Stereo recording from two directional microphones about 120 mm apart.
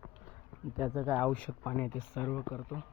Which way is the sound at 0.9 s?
15° right (ahead or behind).